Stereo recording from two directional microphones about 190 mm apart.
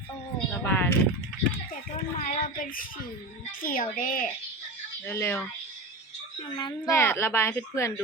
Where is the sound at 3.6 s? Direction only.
45° left (ahead or behind).